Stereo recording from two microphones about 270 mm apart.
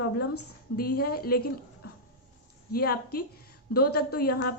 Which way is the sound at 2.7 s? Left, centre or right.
Left.